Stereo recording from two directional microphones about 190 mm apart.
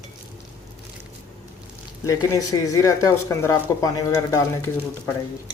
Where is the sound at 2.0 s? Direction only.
15° left (ahead or behind).